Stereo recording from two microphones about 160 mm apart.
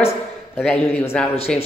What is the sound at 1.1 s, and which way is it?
Speech, 5° left (ahead or behind).